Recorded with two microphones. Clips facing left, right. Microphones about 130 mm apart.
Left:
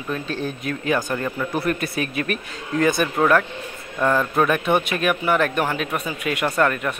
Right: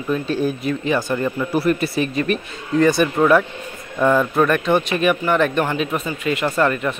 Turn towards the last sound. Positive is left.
turn(degrees=0)  # may be behind; listen again after turning